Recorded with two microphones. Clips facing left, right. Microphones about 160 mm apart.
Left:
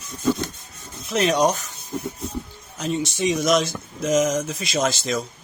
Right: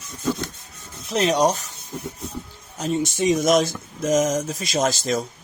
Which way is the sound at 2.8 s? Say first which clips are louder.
Right 2 dB; 45° right (ahead or behind).